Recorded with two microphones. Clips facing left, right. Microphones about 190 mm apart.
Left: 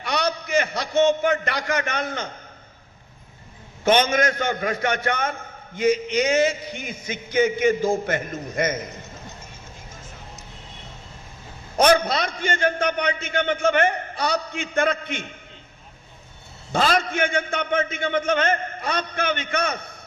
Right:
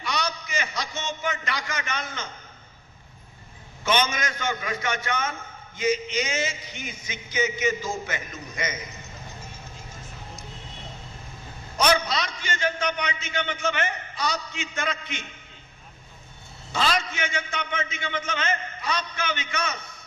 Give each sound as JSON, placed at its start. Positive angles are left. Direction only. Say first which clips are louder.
{"t": 0.0, "sound": "a sound", "louder": "left 5 dB", "side_deg": 60}
{"t": 3.8, "sound": "a man's voice", "louder": "left 7 dB", "side_deg": 55}
{"t": 11.8, "sound": "a man's voice", "louder": "left 5 dB", "side_deg": 55}
{"t": 16.7, "sound": "a man's voice", "louder": "left 5 dB", "side_deg": 55}